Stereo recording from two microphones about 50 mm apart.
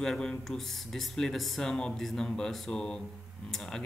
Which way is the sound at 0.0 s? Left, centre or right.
Centre.